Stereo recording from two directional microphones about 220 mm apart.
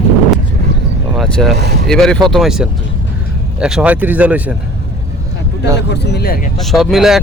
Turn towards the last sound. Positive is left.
turn(degrees=0)  # may be behind; listen again after turning